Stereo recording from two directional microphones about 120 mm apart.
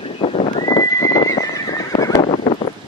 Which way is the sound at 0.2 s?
55° left (ahead or behind).